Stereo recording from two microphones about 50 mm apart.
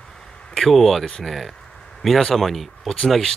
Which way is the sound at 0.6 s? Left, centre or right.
Centre.